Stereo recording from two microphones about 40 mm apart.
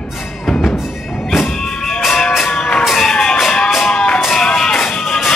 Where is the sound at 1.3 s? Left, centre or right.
Centre.